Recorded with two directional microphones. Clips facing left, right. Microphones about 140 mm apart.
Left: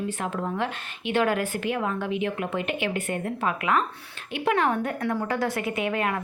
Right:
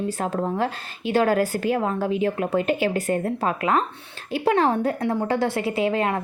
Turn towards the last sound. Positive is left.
turn(degrees=-30)  # may be behind; listen again after turning